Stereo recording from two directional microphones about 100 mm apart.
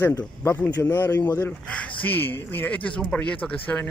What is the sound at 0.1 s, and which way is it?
Speech, 30° left (ahead or behind).